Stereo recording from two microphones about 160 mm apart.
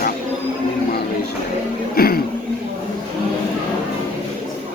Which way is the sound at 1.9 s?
70° left (ahead or behind).